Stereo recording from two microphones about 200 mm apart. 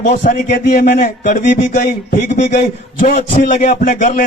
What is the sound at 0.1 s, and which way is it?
A man's voice, 55° left (ahead or behind).